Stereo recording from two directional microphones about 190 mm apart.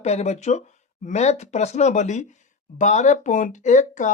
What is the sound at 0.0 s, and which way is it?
Speech, 35° left (ahead or behind).